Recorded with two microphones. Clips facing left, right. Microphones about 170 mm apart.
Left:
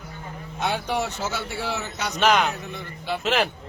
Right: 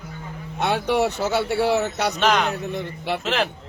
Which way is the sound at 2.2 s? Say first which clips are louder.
Left 1 dB; 5° left (ahead or behind).